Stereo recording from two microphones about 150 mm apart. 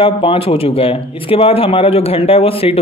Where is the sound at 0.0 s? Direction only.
35° left (ahead or behind).